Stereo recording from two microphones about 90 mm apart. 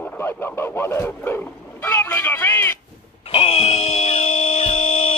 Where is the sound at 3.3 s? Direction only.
90° left.